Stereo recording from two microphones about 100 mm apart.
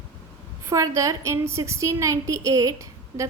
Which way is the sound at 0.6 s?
30° right (ahead or behind).